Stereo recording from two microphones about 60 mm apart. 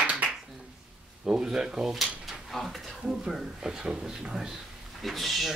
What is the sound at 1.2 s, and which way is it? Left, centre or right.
Drawer open or close, centre.